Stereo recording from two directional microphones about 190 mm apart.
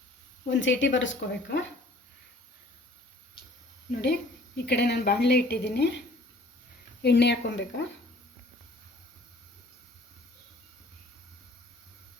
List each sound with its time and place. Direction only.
0.5 s speech: 75° left (ahead or behind)
4.0 s a woman's voice: 60° left (ahead or behind)
7.0 s a woman's voice: 60° left (ahead or behind)